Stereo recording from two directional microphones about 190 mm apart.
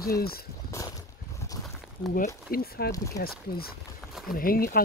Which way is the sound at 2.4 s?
55° left (ahead or behind).